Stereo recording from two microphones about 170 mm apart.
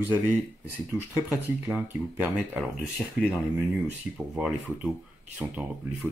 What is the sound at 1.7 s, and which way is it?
A man's voice, 10° right (ahead or behind).